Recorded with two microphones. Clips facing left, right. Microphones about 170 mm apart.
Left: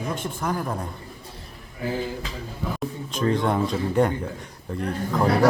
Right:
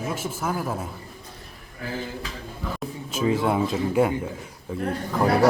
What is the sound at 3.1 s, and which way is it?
Speech, 5° right (ahead or behind).